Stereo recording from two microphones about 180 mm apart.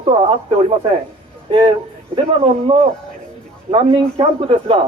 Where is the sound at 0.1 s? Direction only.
35° right (ahead or behind).